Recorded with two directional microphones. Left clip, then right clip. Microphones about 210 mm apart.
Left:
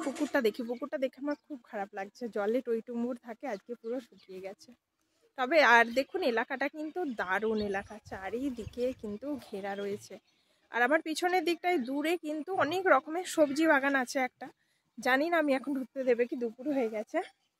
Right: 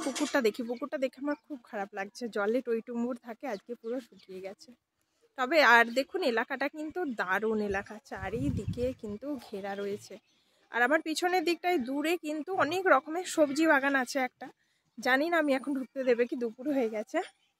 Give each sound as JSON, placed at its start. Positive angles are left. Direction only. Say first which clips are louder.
{"t": 0.0, "sound": "speech", "louder": "right 1 dB", "side_deg": -40}
{"t": 0.3, "sound": "speech", "louder": "right 1 dB", "side_deg": -10}